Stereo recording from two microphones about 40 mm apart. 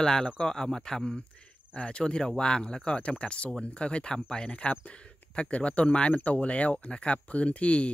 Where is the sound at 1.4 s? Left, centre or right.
Left.